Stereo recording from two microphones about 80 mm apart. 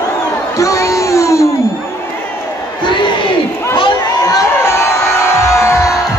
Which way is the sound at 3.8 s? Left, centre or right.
Left.